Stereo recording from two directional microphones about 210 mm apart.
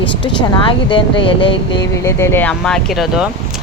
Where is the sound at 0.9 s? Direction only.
25° left (ahead or behind).